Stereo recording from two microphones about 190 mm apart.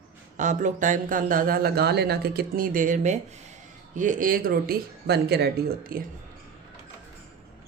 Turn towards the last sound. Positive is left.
turn(degrees=-50)  # may be behind; listen again after turning